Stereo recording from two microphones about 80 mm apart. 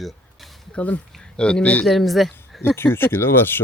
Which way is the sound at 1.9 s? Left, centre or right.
Centre.